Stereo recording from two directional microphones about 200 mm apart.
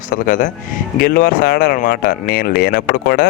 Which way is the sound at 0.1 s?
40° left (ahead or behind).